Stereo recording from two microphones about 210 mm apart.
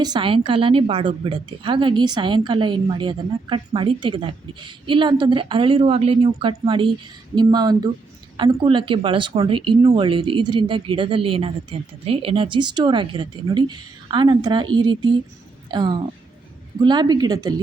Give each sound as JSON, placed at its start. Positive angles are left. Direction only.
{"t": 0.0, "sound": "a woman's voice", "side_deg": -20}